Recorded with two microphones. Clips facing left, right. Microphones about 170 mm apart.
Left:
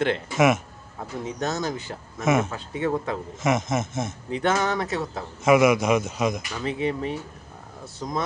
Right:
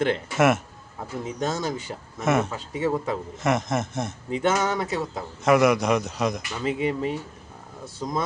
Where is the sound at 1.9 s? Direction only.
15° right (ahead or behind).